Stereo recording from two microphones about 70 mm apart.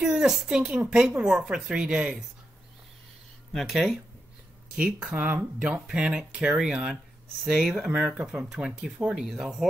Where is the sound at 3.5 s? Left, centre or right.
Centre.